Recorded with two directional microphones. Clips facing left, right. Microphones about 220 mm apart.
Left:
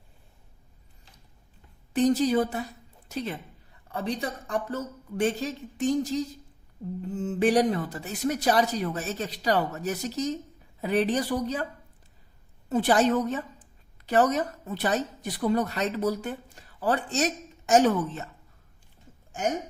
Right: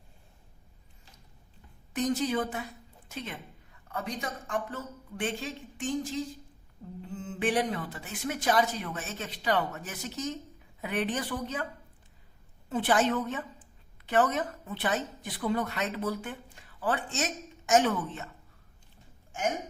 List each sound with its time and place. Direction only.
2.0 s a woman's voice: 35° left (ahead or behind)
12.6 s a woman's voice: 40° left (ahead or behind)